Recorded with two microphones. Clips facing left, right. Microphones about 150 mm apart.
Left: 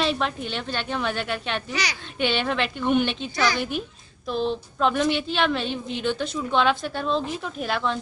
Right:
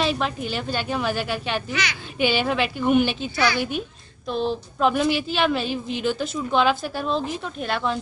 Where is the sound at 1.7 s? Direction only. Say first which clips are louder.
Right 1 dB; 35° left (ahead or behind).